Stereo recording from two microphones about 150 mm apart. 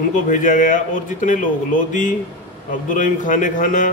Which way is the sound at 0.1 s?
60° left (ahead or behind).